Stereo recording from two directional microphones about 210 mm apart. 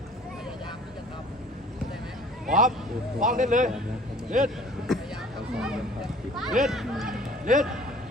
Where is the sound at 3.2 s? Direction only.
40° right (ahead or behind).